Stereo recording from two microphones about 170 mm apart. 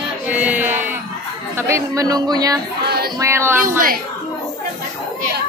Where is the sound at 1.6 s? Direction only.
15° right (ahead or behind).